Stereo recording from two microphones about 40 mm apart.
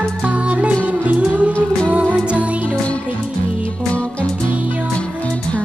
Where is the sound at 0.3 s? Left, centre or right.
Right.